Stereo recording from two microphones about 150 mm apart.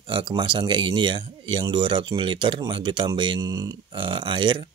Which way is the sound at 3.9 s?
35° right (ahead or behind).